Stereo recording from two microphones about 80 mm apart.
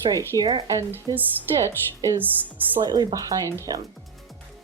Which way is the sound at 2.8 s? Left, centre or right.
Right.